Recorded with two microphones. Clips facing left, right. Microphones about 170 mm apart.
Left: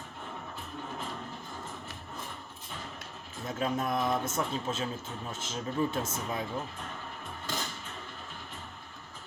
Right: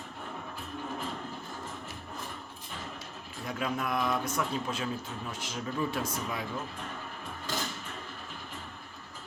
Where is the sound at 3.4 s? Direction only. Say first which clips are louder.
Left 2 dB; 25° left (ahead or behind).